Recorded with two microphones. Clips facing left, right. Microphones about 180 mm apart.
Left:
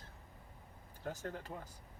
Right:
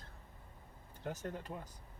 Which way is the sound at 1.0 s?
20° right (ahead or behind).